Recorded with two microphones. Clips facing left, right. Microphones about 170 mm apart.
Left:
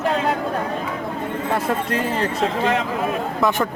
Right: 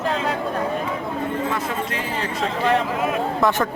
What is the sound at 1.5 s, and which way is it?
Speech, 40° left (ahead or behind).